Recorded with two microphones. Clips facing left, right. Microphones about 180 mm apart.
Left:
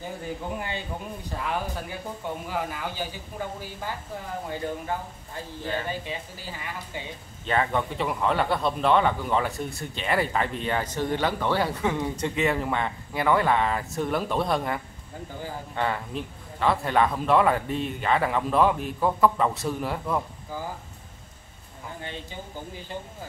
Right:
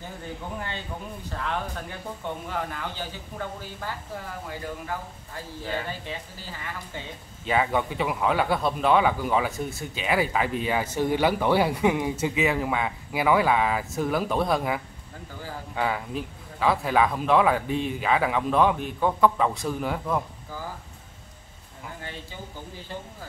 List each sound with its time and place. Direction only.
0.6 s a man's voice: 15° left (ahead or behind)
4.5 s a man's voice: 25° left (ahead or behind)
7.4 s speech: 5° right (ahead or behind)